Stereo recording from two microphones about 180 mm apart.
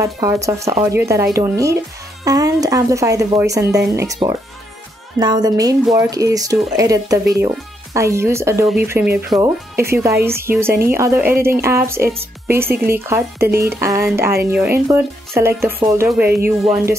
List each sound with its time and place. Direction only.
0.0 s speech: 15° right (ahead or behind)